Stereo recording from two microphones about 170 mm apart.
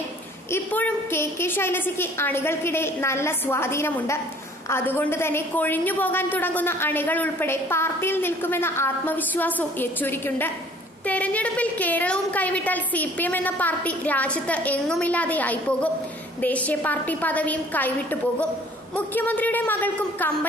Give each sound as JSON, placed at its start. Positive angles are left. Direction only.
{"t": 0.5, "sound": "a woman's voice", "side_deg": 10}
{"t": 18.9, "sound": "a woman's voice", "side_deg": 10}